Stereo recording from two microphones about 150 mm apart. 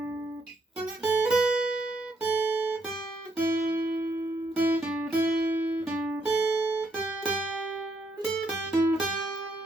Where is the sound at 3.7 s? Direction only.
15° right (ahead or behind).